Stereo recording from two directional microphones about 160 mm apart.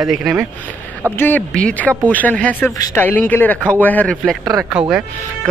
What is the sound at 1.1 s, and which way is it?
A man's voice, 10° left (ahead or behind).